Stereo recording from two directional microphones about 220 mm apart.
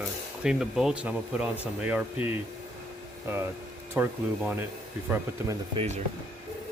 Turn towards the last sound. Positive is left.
turn(degrees=-30)  # may be behind; listen again after turning